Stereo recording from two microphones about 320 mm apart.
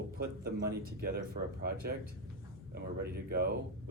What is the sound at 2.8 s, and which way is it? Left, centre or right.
Speech, right.